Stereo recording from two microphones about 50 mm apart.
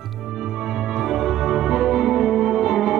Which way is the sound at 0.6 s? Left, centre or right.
Centre.